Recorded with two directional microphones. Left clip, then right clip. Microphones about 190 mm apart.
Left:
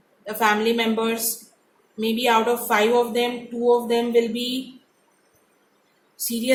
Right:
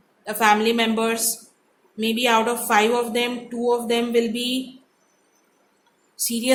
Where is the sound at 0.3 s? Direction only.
35° right (ahead or behind).